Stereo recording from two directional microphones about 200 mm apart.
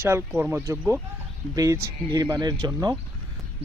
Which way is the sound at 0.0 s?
10° right (ahead or behind).